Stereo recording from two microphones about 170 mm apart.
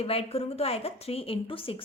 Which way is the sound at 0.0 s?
35° left (ahead or behind).